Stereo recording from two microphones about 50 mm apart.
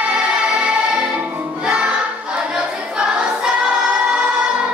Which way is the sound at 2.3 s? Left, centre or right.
Centre.